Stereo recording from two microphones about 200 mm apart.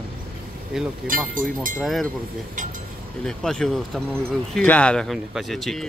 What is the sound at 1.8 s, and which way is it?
Speech, centre (ahead or behind).